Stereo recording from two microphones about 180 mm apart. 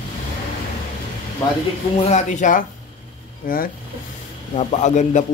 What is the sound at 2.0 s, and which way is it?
Speech, 40° left (ahead or behind).